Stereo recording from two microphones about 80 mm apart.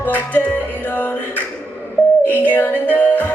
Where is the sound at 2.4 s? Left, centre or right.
Left.